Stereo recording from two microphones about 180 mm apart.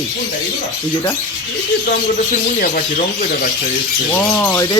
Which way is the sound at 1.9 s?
50° left (ahead or behind).